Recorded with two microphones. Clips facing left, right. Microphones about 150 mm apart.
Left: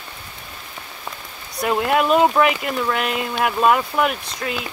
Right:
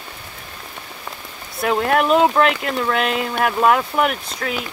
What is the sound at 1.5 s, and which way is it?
Speech, 5° left (ahead or behind).